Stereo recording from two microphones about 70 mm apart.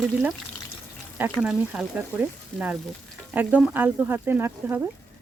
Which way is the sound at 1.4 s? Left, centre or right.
Centre.